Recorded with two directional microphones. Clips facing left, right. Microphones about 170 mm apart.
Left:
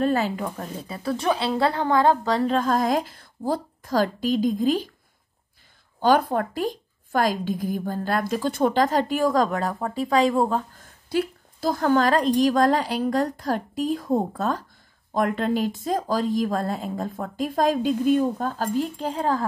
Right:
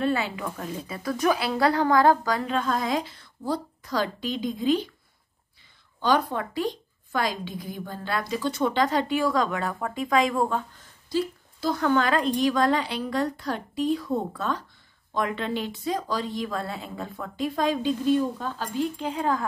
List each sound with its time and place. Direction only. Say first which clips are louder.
0.0 s a woman's voice: left 3 dB; 40° left (ahead or behind)
5.9 s a woman's voice: left 4 dB; 50° left (ahead or behind); by 10.6 s 30° left (ahead or behind)
10.8 s a woman's voice: left 2 dB; 55° left (ahead or behind); by 19.4 s 35° left (ahead or behind)